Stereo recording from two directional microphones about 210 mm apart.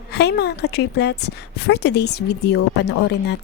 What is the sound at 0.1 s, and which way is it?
A woman's voice, 50° left (ahead or behind).